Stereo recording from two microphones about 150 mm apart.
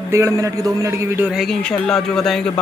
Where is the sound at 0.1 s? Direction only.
20° right (ahead or behind).